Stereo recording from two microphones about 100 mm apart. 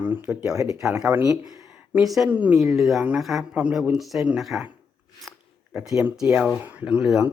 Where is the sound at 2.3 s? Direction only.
15° right (ahead or behind).